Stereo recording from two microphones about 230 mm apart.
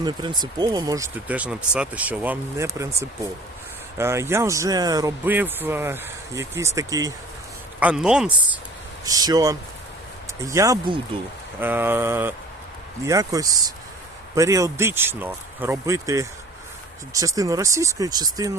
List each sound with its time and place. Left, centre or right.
0.0 s speech: centre
7.8 s speech: centre
9.0 s speech: centre